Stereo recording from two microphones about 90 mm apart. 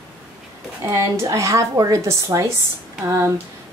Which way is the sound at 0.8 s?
30° right (ahead or behind).